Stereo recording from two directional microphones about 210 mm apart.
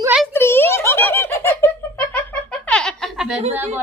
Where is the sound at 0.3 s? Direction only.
10° left (ahead or behind).